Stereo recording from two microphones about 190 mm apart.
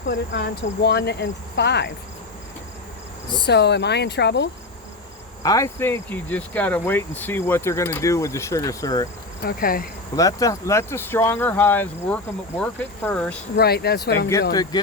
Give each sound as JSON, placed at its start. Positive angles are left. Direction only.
{"t": 0.1, "sound": "cricket", "side_deg": 60}
{"t": 3.4, "sound": "cricket", "side_deg": 65}
{"t": 5.4, "sound": "speech", "side_deg": 20}
{"t": 9.4, "sound": "insect", "side_deg": 50}
{"t": 10.2, "sound": "speech", "side_deg": 20}
{"t": 13.6, "sound": "cricket", "side_deg": 55}
{"t": 14.5, "sound": "speech", "side_deg": 20}